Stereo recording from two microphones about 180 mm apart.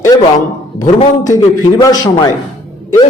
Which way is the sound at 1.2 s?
20° left (ahead or behind).